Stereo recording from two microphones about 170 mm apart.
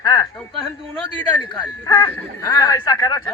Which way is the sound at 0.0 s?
20° left (ahead or behind).